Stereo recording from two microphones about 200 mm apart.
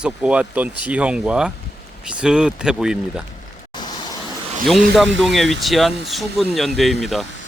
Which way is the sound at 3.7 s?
20° left (ahead or behind).